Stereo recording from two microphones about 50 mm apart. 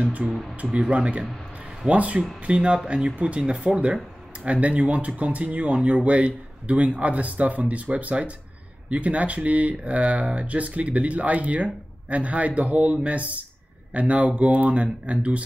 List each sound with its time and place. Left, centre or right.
0.0 s speech: right